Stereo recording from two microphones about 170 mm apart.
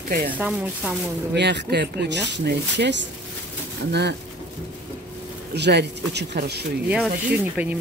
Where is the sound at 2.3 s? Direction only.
90° right.